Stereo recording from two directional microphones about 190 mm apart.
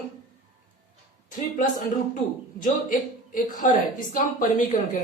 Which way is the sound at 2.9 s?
45° left (ahead or behind).